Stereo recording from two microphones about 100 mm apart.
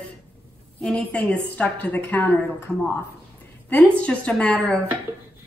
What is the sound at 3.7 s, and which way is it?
A woman's voice, 10° left (ahead or behind).